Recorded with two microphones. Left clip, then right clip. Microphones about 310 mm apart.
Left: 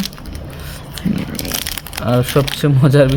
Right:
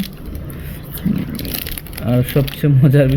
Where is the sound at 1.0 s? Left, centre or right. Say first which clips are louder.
Left 1 dB; centre.